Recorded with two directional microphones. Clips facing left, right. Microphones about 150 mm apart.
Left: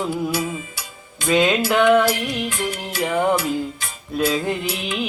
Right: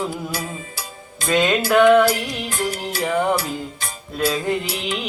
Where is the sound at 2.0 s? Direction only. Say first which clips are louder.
Even; 35° right (ahead or behind).